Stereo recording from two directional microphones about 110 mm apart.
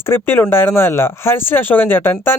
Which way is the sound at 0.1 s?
20° left (ahead or behind).